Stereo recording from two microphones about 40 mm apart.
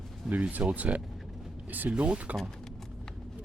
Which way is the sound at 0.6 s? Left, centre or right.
Right.